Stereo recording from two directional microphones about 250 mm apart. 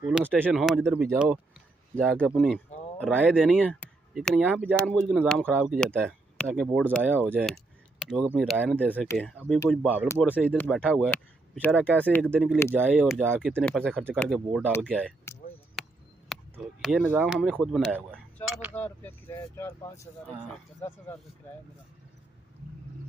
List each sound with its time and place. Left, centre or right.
0.0 s speech: centre
15.8 s a sound: centre
16.3 s speech: centre
18.8 s speech: centre
20.8 s speech: centre